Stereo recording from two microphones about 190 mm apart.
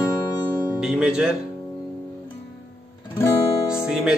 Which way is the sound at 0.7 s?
5° right (ahead or behind).